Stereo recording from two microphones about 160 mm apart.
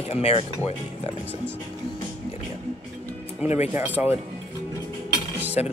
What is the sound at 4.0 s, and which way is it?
Speech, 10° right (ahead or behind).